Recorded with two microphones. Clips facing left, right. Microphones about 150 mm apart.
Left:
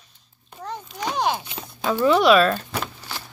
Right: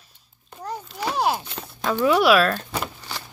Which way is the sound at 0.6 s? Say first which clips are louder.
Right 1 dB; 10° right (ahead or behind).